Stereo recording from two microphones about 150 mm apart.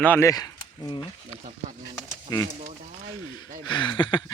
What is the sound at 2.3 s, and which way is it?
Speech, 25° left (ahead or behind).